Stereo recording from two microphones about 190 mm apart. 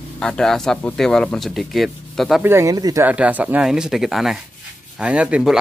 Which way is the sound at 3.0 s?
10° right (ahead or behind).